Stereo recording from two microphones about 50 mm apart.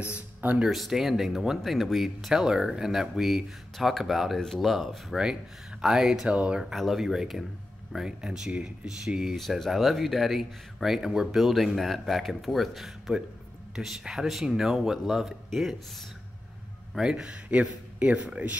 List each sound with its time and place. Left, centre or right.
0.7 s speech: centre
6.3 s a man's voice: right
6.6 s speech: centre
9.3 s speech: centre
16.9 s speech: centre
17.5 s a man's voice: right